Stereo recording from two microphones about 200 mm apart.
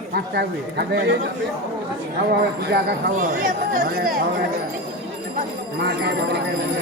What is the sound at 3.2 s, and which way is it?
Speech, 40° right (ahead or behind).